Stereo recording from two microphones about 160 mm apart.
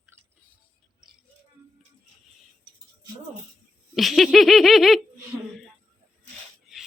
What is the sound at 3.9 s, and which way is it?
Laughter, centre (ahead or behind).